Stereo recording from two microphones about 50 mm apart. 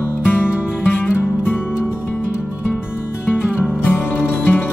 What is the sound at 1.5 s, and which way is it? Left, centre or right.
Music, left.